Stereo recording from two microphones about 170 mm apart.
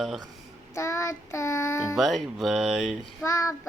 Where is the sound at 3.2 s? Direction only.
20° left (ahead or behind).